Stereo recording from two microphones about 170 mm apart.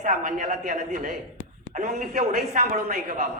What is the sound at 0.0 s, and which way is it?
A man's voice, 45° right (ahead or behind).